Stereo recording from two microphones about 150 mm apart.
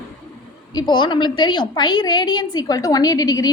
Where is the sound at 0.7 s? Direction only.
30° left (ahead or behind).